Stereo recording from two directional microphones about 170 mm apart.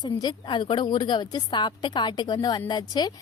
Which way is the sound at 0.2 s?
25° left (ahead or behind).